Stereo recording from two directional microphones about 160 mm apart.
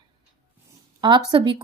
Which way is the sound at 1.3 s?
30° right (ahead or behind).